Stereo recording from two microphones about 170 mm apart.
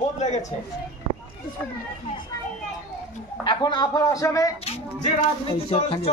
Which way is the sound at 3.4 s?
25° left (ahead or behind).